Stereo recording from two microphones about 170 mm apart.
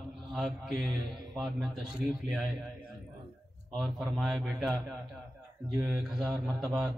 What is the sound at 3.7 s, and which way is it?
A man's voice, centre (ahead or behind).